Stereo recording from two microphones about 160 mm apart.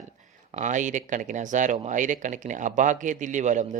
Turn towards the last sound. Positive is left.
turn(degrees=-50)  # may be behind; listen again after turning